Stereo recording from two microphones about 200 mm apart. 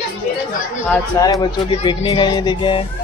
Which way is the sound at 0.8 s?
15° left (ahead or behind).